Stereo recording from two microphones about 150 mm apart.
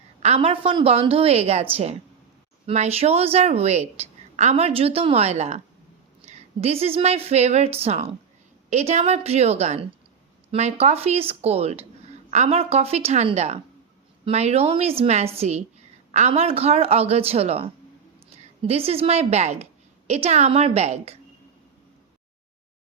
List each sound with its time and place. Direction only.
0.2 s a woman's voice: 40° right (ahead or behind)